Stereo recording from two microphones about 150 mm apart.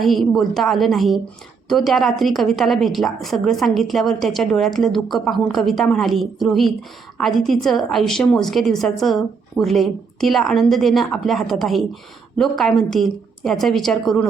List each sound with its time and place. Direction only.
0.0 s a woman's voice: centre (ahead or behind)